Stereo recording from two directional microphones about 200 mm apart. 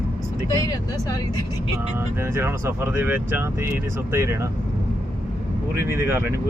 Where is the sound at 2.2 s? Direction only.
10° right (ahead or behind).